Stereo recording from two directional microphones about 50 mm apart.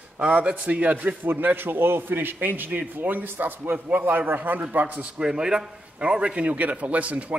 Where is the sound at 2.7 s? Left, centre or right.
Right.